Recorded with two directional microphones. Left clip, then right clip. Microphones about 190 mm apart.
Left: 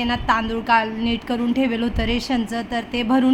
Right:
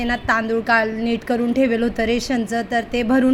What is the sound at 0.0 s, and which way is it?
A woman's voice, 15° right (ahead or behind).